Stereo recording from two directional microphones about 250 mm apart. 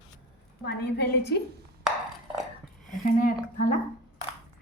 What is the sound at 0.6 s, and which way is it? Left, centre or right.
Speech, left.